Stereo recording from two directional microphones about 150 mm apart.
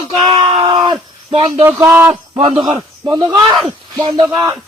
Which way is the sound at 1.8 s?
15° right (ahead or behind).